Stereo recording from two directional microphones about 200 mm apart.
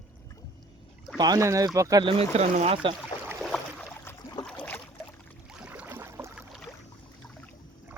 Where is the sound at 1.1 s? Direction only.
20° right (ahead or behind).